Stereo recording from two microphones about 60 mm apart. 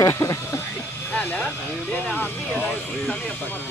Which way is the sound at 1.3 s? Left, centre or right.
Left.